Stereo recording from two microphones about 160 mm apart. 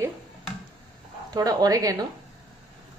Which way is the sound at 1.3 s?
20° right (ahead or behind).